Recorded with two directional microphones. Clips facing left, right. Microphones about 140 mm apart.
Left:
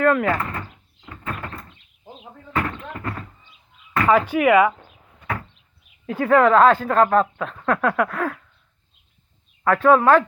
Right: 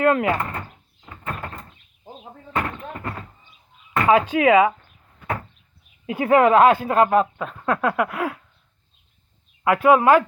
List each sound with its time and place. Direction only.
0.0 s speech: 20° right (ahead or behind)
1.0 s door: 5° right (ahead or behind)
2.6 s a sound: 10° right (ahead or behind)
4.1 s speech: 20° right (ahead or behind)
6.1 s speech: 15° right (ahead or behind)
9.6 s speech: 10° right (ahead or behind)